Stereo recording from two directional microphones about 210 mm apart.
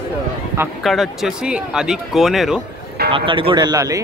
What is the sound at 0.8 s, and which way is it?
Speech, centre (ahead or behind).